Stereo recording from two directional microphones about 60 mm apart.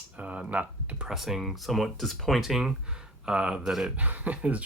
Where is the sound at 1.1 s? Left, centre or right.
Centre.